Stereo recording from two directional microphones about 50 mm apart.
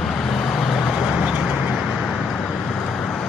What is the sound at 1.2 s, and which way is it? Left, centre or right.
Vehicle, centre.